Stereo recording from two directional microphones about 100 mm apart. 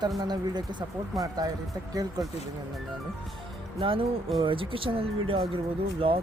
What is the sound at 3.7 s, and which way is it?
Speech, 60° right (ahead or behind).